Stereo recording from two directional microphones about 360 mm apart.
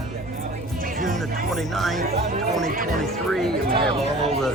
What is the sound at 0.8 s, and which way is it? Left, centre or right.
Music, right.